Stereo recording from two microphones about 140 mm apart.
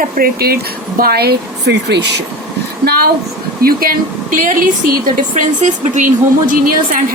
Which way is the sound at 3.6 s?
90° right.